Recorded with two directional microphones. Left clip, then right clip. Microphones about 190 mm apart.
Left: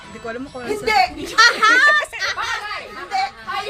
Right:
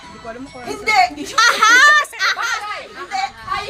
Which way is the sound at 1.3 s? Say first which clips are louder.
Right 1 dB; 45° right (ahead or behind).